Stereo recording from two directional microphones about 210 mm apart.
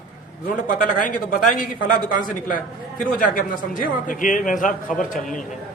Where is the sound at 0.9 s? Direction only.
40° left (ahead or behind).